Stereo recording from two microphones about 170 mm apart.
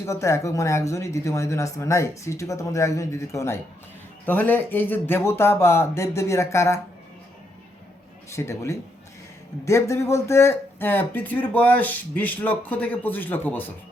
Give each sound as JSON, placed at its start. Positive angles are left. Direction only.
{"t": 0.0, "sound": "speech", "side_deg": 15}
{"t": 8.3, "sound": "speech", "side_deg": 15}